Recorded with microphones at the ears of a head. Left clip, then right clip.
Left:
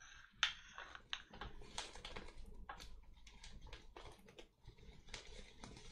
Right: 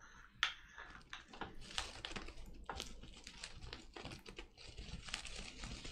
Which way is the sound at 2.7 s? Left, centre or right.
Right.